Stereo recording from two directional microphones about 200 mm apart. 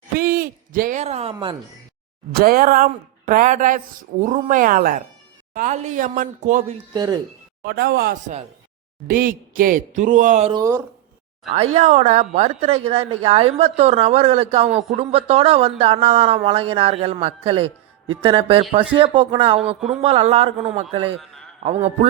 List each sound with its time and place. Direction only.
0.2 s hoot: 45° right (ahead or behind); by 1.5 s 25° right (ahead or behind)
2.3 s a woman's voice: 45° right (ahead or behind)
6.9 s speech: 20° right (ahead or behind)
7.6 s a woman's voice: 50° right (ahead or behind); by 10.5 s 35° right (ahead or behind)
10.5 s speech: 15° right (ahead or behind)
11.5 s a woman's voice: 30° right (ahead or behind)